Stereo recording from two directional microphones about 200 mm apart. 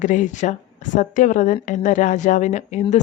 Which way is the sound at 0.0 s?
40° left (ahead or behind).